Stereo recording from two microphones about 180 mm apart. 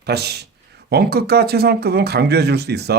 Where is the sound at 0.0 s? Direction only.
65° right (ahead or behind).